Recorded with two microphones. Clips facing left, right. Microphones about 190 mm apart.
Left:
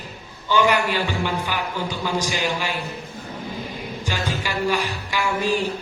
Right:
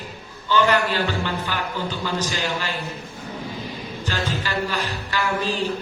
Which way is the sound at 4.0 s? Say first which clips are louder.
Right 1 dB; 10° left (ahead or behind).